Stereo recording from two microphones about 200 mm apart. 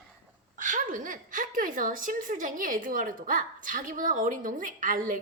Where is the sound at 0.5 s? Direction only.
40° right (ahead or behind).